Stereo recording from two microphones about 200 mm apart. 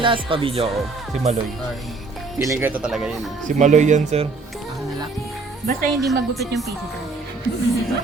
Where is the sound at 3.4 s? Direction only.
35° right (ahead or behind).